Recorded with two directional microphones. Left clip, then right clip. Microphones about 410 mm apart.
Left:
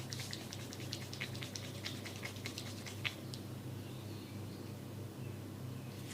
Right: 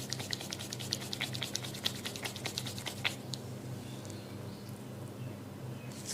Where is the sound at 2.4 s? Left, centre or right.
Right.